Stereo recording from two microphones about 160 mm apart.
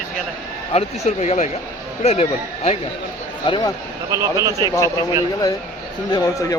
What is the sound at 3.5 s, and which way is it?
Speech, 30° left (ahead or behind).